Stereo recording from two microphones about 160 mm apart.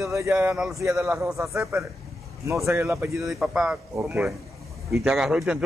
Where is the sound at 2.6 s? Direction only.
20° right (ahead or behind).